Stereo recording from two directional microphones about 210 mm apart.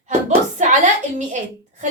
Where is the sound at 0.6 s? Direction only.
35° right (ahead or behind).